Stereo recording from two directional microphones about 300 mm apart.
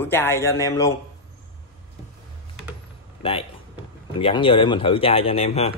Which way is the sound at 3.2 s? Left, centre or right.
Centre.